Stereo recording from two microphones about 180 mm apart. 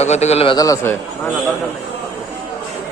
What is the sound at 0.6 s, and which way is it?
Speech, 15° left (ahead or behind).